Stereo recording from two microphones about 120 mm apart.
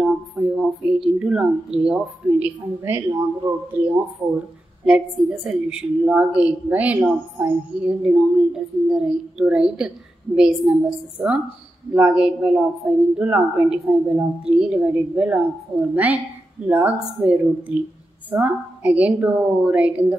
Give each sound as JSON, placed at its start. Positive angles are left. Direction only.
{"t": 0.0, "sound": "a woman's voice", "side_deg": -5}
{"t": 4.8, "sound": "a woman's voice", "side_deg": -5}